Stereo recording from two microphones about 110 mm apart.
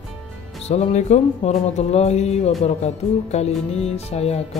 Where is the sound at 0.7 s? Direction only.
85° left.